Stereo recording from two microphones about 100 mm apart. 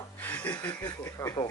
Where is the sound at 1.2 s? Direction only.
35° left (ahead or behind).